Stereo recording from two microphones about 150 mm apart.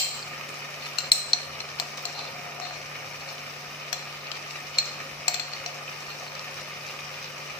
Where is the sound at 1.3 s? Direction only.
30° left (ahead or behind).